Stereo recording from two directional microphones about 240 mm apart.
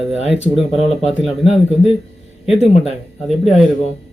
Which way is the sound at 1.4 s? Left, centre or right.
Left.